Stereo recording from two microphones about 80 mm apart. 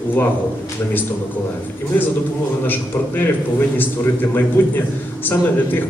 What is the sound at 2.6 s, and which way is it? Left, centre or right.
A man's voice, left.